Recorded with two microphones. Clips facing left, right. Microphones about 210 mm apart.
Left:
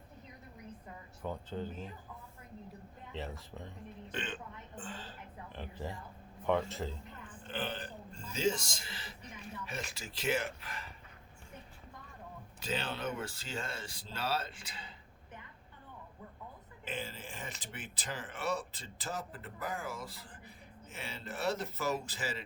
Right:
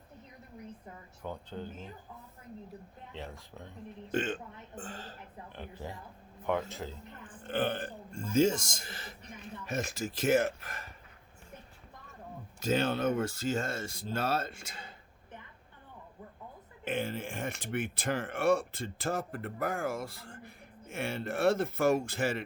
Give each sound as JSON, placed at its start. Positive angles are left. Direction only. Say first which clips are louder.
{"t": 1.2, "sound": "speech", "louder": "left 1 dB", "side_deg": 0}
{"t": 3.1, "sound": "speech", "louder": "left 2 dB", "side_deg": 0}
{"t": 4.1, "sound": "speech", "louder": "right 9 dB", "side_deg": -45}
{"t": 5.5, "sound": "speech", "louder": "left 1 dB", "side_deg": 0}
{"t": 7.4, "sound": "speech", "louder": "right 8 dB", "side_deg": -55}
{"t": 12.5, "sound": "speech", "louder": "right 9 dB", "side_deg": -45}
{"t": 16.8, "sound": "speech", "louder": "right 8 dB", "side_deg": -55}